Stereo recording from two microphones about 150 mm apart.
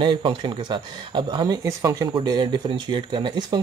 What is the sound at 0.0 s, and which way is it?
Speech, 35° right (ahead or behind).